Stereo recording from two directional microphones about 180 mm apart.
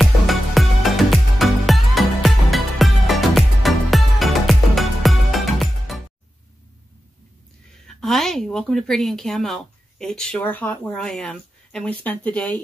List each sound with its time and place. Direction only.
0.0 s music: centre (ahead or behind)
7.8 s speech: centre (ahead or behind)